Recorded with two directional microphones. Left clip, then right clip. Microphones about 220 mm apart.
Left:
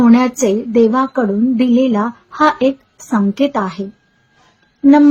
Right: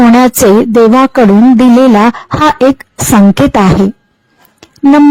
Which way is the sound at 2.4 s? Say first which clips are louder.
Right 3 dB; 45° right (ahead or behind).